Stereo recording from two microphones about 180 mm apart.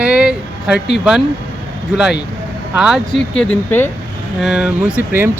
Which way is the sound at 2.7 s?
Centre (ahead or behind).